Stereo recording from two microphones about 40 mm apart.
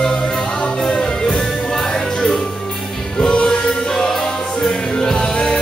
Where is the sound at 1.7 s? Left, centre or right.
Centre.